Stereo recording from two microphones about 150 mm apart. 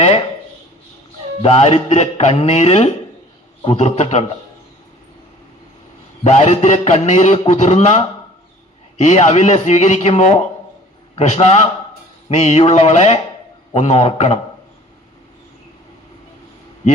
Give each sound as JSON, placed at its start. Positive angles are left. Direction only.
{"t": 1.4, "sound": "a man's voice", "side_deg": 40}
{"t": 6.2, "sound": "a man's voice", "side_deg": 45}